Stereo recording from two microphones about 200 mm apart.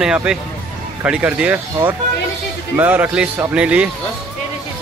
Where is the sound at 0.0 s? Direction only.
5° right (ahead or behind).